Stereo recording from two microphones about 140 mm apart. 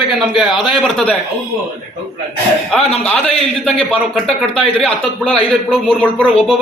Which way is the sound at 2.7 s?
5° left (ahead or behind).